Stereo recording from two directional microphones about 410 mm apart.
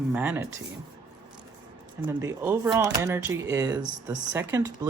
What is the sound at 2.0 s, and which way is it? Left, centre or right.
Speech, centre.